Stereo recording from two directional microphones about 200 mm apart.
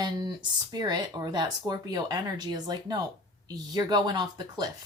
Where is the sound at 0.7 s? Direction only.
20° right (ahead or behind).